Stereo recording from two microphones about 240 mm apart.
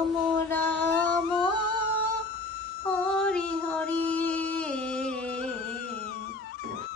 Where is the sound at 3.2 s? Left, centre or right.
Centre.